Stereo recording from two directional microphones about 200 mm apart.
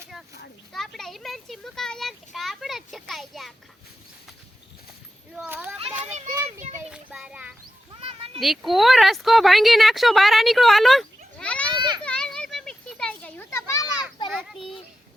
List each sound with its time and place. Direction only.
0.7 s speech: centre (ahead or behind)
5.3 s speech: 5° right (ahead or behind)
6.9 s speech: 5° right (ahead or behind)
8.0 s a sound: 30° right (ahead or behind)
8.4 s speech: centre (ahead or behind)
11.7 s children playing: 25° right (ahead or behind)
12.0 s children playing: 5° left (ahead or behind)
14.3 s a child's voice: centre (ahead or behind)